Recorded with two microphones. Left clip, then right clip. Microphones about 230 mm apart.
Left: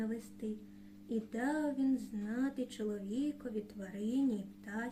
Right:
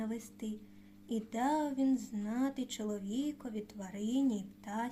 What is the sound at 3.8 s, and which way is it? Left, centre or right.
Speech, right.